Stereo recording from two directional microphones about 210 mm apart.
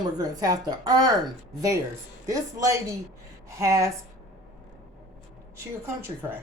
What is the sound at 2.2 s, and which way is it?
A woman's voice, 15° right (ahead or behind).